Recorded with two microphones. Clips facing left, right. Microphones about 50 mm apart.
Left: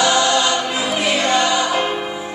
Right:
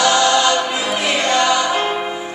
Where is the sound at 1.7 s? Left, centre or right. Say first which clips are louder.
Right 1 dB; centre.